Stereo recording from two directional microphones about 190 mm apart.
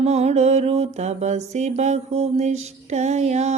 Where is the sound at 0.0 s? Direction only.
35° right (ahead or behind).